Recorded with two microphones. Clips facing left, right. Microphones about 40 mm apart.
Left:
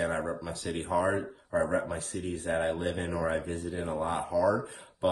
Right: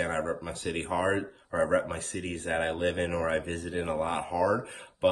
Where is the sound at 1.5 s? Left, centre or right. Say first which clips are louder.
Right 2 dB; right.